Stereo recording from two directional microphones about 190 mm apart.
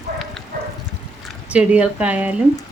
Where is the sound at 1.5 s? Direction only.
5° right (ahead or behind).